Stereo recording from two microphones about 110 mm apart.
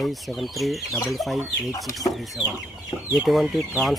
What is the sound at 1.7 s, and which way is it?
Speech, 30° left (ahead or behind).